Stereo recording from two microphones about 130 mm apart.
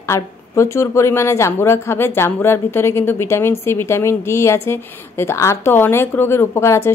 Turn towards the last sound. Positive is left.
turn(degrees=20)  # may be behind; listen again after turning